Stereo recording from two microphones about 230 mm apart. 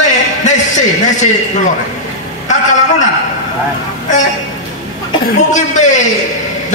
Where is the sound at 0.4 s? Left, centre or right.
Left.